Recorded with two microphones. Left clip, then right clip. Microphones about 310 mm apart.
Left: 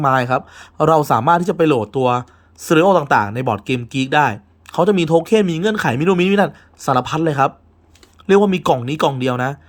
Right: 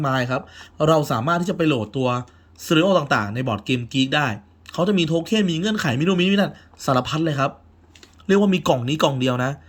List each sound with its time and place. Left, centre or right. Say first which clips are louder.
0.0 s speech: left 7 dB; centre